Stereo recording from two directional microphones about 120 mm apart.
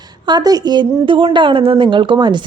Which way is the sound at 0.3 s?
35° right (ahead or behind).